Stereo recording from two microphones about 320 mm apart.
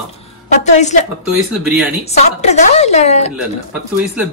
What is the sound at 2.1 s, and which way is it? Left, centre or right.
A woman's voice, left.